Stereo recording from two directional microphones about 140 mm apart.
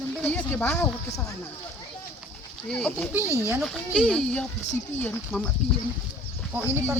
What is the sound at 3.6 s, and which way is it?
Speech, centre (ahead or behind).